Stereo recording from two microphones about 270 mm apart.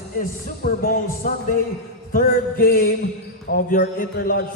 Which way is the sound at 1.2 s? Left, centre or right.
Left.